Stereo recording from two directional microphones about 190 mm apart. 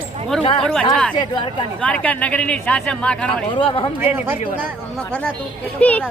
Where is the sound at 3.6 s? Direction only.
25° left (ahead or behind).